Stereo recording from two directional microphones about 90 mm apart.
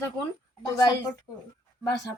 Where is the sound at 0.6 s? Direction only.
40° left (ahead or behind).